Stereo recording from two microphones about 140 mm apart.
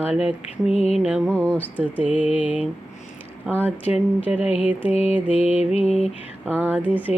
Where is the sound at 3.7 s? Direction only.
10° right (ahead or behind).